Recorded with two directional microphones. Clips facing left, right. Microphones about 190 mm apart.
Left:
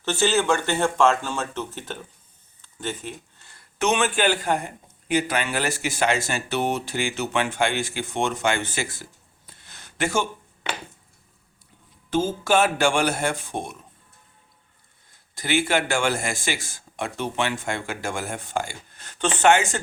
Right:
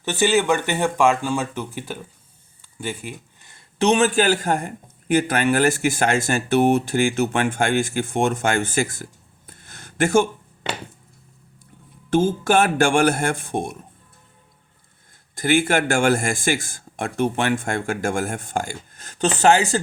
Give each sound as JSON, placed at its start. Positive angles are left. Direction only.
{"t": 0.0, "sound": "speech", "side_deg": -15}
{"t": 2.6, "sound": "a sound", "side_deg": -10}
{"t": 3.8, "sound": "a man's voice", "side_deg": -35}
{"t": 9.5, "sound": "a sound", "side_deg": -50}
{"t": 12.1, "sound": "a man's voice", "side_deg": -50}
{"t": 15.4, "sound": "a man's voice", "side_deg": -50}